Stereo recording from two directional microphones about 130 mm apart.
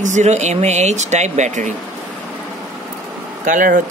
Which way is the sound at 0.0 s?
65° right (ahead or behind).